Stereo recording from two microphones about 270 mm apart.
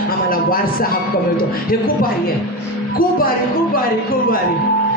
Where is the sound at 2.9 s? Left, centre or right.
Left.